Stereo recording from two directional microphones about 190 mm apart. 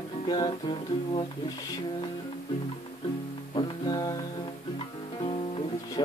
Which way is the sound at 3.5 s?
20° left (ahead or behind).